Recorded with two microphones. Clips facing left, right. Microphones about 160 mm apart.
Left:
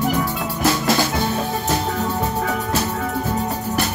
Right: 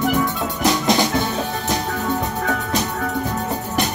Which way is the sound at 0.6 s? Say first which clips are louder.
Right 1 dB; 20° right (ahead or behind).